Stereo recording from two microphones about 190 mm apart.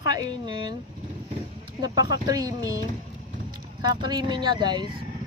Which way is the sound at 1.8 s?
20° right (ahead or behind).